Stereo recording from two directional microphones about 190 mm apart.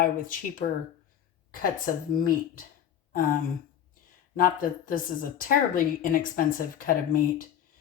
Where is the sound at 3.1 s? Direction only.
50° left (ahead or behind).